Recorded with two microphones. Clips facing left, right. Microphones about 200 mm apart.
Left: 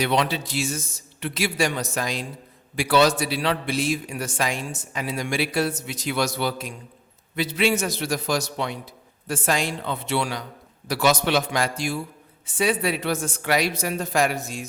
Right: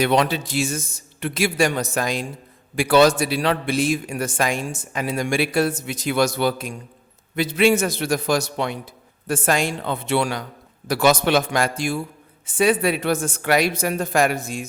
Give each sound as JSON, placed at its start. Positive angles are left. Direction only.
{"t": 0.0, "sound": "a man's voice", "side_deg": -50}